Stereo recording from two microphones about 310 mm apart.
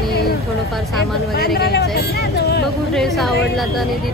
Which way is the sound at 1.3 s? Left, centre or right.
Left.